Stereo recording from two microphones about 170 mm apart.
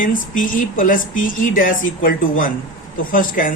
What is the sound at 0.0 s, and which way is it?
A woman's voice, 50° left (ahead or behind).